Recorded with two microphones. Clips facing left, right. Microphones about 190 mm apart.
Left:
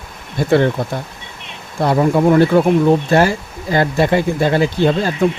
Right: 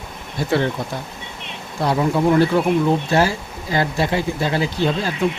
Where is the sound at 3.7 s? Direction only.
55° left (ahead or behind).